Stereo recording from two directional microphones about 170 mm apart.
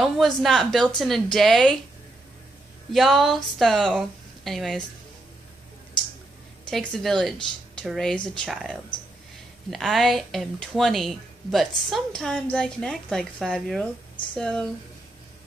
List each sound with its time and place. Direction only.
0.0 s speech: centre (ahead or behind)
2.9 s speech: centre (ahead or behind)
6.7 s speech: centre (ahead or behind)